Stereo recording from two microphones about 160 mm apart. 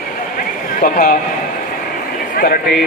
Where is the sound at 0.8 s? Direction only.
60° left (ahead or behind).